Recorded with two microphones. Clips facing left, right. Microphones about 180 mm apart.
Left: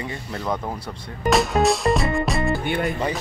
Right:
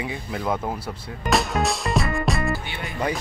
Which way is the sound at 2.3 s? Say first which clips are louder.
Left 1 dB; centre (ahead or behind).